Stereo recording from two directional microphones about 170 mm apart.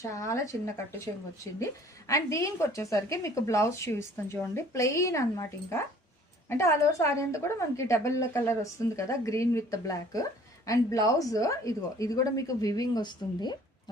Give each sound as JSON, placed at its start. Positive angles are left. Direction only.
{"t": 0.0, "sound": "a woman's voice", "side_deg": 20}